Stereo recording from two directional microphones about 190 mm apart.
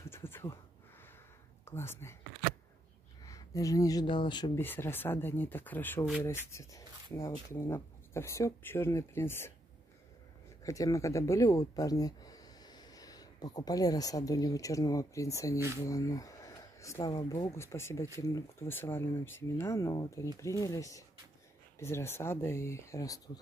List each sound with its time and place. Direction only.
0.1 s a sound: 10° left (ahead or behind)
1.7 s speech: 15° left (ahead or behind)
3.3 s speech: 15° left (ahead or behind)
4.6 s speech: 10° left (ahead or behind)
10.6 s speech: 15° left (ahead or behind)